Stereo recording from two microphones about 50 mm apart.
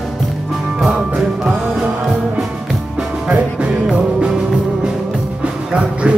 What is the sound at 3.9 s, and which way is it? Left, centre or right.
Music, centre.